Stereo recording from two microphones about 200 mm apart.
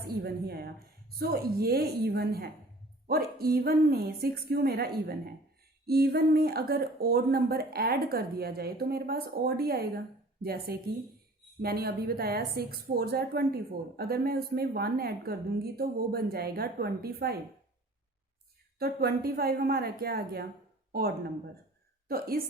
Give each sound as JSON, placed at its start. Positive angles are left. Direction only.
{"t": 0.0, "sound": "a woman's voice", "side_deg": -50}
{"t": 18.8, "sound": "a woman's voice", "side_deg": -50}